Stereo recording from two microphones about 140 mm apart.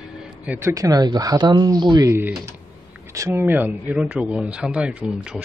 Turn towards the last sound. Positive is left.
turn(degrees=-10)  # may be behind; listen again after turning